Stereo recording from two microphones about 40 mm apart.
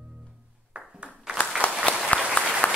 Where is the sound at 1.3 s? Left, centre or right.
Right.